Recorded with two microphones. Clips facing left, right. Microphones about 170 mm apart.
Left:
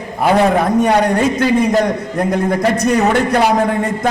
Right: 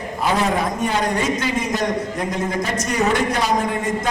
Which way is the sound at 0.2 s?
60° left (ahead or behind).